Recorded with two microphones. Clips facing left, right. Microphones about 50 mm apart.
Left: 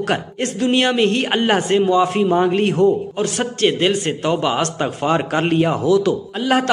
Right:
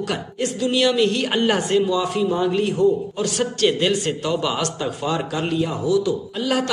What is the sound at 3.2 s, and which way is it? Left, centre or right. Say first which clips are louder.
A man's voice: left 2 dB; left.